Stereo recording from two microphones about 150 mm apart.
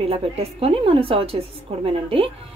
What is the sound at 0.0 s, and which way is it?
A woman's voice, 40° right (ahead or behind).